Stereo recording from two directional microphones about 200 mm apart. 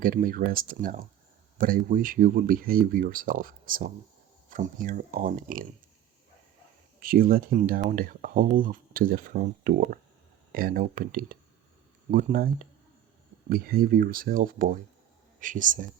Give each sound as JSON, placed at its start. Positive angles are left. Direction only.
{"t": 0.0, "sound": "speech", "side_deg": -45}
{"t": 7.0, "sound": "speech", "side_deg": -45}
{"t": 13.5, "sound": "speech", "side_deg": -50}